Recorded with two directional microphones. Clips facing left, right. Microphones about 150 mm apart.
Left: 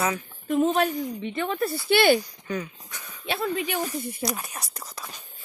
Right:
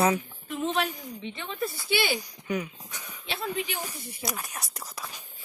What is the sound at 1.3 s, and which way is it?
Speech, 60° left (ahead or behind).